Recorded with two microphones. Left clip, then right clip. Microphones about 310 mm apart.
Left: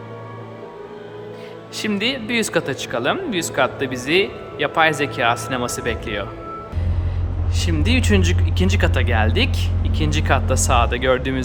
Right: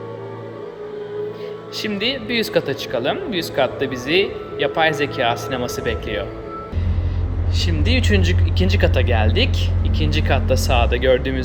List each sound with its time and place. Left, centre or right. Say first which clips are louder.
1.7 s speech: left 1 dB; centre
7.6 s speech: even; centre